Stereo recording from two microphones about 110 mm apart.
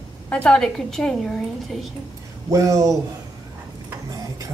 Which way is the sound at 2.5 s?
30° right (ahead or behind).